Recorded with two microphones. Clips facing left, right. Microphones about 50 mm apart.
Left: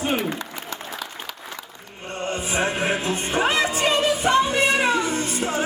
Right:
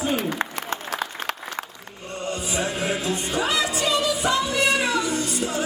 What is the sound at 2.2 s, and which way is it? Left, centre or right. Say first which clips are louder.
Music: left 3 dB; left.